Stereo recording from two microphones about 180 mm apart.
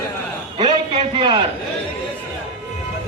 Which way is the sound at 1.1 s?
30° right (ahead or behind).